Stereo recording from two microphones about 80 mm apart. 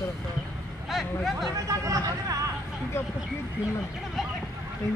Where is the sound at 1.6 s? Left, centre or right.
Right.